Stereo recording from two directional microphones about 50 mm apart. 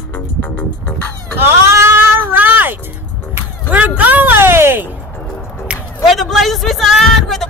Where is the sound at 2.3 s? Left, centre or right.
Right.